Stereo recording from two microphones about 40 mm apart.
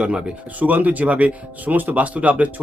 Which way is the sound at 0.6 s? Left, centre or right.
Right.